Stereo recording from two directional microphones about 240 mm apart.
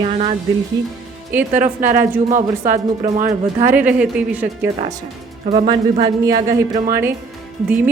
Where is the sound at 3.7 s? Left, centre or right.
Centre.